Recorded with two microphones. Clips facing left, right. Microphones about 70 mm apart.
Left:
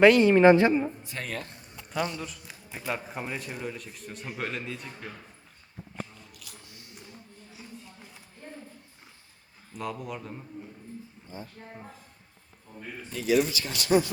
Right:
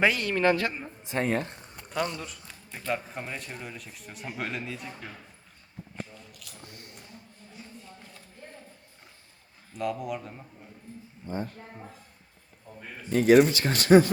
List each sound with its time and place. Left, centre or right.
0.2 s a woman's voice: left
0.7 s a man's voice: centre
1.0 s a woman's voice: right
2.1 s a man's voice: centre
6.3 s a sound: centre
6.7 s a sound: right
7.5 s a sound: centre
9.7 s a man's voice: centre
11.3 s speech: right
13.1 s speech: right